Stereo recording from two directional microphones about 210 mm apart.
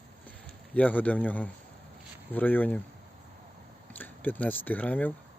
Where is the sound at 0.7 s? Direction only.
5° left (ahead or behind).